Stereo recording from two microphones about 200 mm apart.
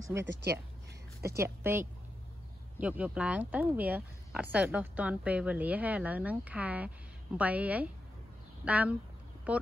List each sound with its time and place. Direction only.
0.1 s speech: 10° right (ahead or behind)
1.3 s speech: 10° right (ahead or behind)